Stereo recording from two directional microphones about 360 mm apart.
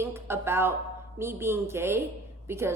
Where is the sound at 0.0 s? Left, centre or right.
Centre.